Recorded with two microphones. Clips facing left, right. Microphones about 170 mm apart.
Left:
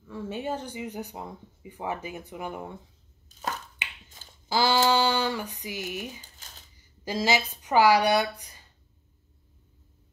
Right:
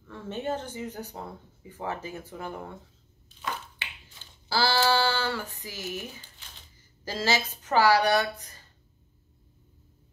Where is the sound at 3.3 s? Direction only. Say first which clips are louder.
Left 6 dB; 40° left (ahead or behind).